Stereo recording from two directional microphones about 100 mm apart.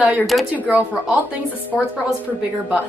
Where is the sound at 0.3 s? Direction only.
5° right (ahead or behind).